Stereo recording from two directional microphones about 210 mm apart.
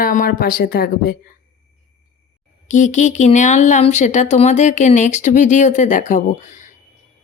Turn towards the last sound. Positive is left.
turn(degrees=35)  # may be behind; listen again after turning